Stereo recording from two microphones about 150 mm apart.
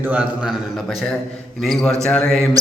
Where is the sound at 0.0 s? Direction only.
10° right (ahead or behind).